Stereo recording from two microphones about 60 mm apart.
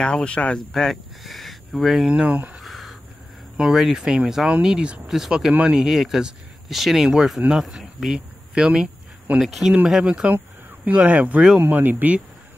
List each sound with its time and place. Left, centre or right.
0.0 s speech: centre
0.7 s speech: centre
2.0 s speech: right
2.6 s a sound: centre
3.5 s speech: centre
5.5 s speech: right
5.8 s speech: centre
10.0 s speech: centre